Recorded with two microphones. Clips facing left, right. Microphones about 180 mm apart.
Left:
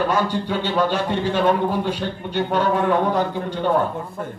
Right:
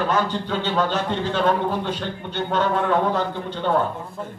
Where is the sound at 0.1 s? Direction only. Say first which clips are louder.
Left 1 dB; 10° left (ahead or behind).